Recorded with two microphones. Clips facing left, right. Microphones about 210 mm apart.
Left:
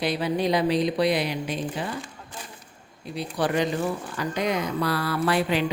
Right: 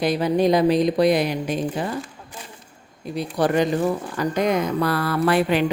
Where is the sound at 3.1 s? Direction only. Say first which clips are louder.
Right 5 dB; 45° right (ahead or behind).